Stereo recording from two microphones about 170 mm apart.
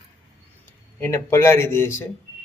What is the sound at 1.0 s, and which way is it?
Speech, 15° left (ahead or behind).